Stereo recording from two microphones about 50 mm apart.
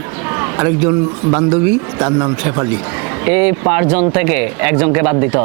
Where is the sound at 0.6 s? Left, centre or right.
Right.